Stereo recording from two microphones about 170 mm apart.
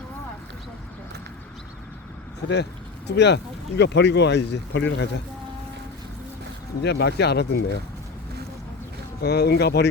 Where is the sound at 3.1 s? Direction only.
90° left.